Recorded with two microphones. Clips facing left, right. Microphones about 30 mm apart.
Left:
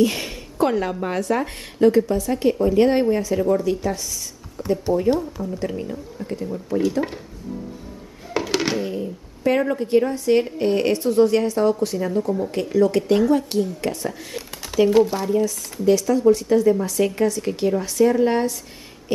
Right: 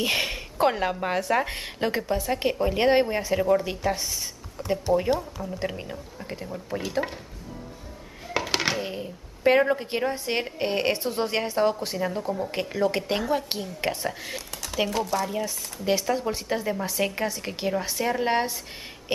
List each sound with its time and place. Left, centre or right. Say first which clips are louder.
0.0 s a woman's voice: left 5 dB; right
4.6 s a sound: left 5 dB; centre
5.1 s speech: left 4 dB; centre
5.6 s a woman's voice: left 5 dB; right
8.3 s a sound: left 4 dB; centre
8.8 s a sound: left 6 dB; right
9.7 s a woman's voice: left 6 dB; right
13.5 s a woman's voice: left 6 dB; right
14.9 s speech: left 11 dB; centre
15.4 s a woman's voice: left 8 dB; right